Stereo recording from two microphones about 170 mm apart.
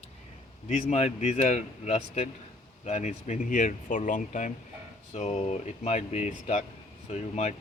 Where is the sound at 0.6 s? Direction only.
40° left (ahead or behind).